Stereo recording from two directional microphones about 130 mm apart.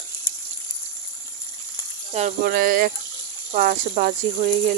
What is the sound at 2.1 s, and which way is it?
Speech, 80° right.